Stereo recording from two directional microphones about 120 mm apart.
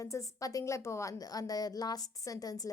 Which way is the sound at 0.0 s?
25° left (ahead or behind).